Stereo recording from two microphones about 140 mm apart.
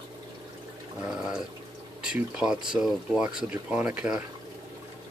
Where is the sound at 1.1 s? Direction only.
5° right (ahead or behind).